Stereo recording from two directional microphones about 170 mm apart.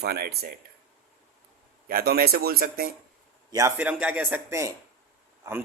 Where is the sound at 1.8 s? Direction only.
65° right (ahead or behind).